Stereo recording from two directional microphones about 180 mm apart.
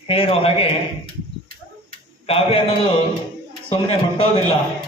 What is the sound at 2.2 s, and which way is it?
Speech, 30° left (ahead or behind).